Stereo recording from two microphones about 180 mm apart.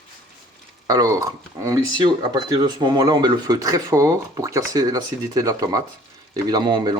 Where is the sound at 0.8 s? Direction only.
20° right (ahead or behind).